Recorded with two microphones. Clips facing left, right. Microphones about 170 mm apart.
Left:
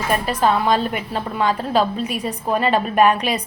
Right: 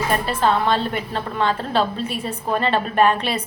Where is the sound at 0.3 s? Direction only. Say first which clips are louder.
Left 2 dB; 10° left (ahead or behind).